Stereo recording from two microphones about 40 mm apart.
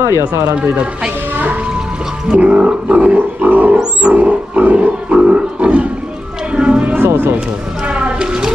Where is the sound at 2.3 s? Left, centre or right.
Right.